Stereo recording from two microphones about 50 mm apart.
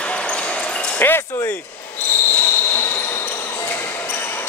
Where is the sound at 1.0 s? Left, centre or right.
Left.